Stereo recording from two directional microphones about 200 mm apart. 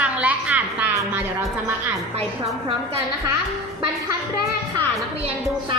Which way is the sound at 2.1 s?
30° right (ahead or behind).